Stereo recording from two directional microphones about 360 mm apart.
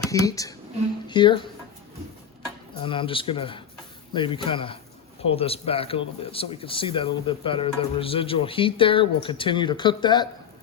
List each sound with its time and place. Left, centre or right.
0.1 s a man's voice: centre
2.8 s a man's voice: centre